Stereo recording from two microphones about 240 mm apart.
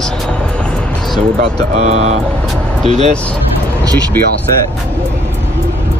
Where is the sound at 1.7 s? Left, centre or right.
Right.